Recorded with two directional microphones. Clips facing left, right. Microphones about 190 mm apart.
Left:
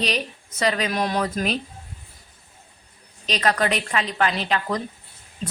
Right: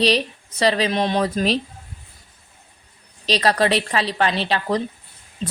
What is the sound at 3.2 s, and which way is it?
A woman's voice, 35° right (ahead or behind).